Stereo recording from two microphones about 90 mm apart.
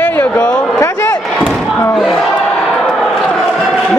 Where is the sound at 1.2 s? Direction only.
5° left (ahead or behind).